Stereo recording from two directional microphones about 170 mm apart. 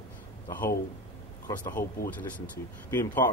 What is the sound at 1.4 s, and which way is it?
Speech, 10° left (ahead or behind).